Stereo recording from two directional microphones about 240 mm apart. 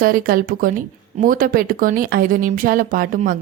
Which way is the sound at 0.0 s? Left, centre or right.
Right.